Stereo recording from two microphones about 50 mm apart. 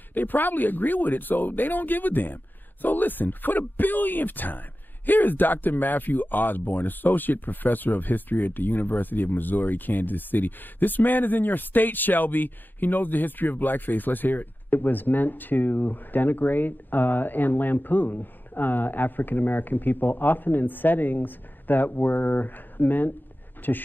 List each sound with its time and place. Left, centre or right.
0.1 s speech: left